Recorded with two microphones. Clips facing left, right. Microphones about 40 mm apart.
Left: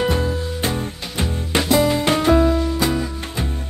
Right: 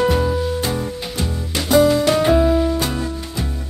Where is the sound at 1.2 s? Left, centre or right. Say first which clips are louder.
Left 5 dB; left.